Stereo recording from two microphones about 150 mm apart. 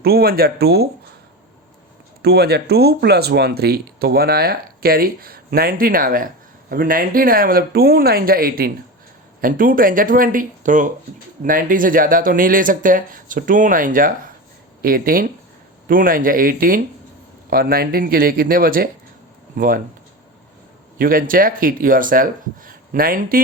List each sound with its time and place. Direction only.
0.0 s speech: 90° right
2.2 s speech: 90° right
9.4 s speech: 70° right (ahead or behind)
14.8 s speech: 80° right
17.5 s speech: 85° right; by 19.8 s 70° right (ahead or behind)
21.0 s speech: 70° right (ahead or behind)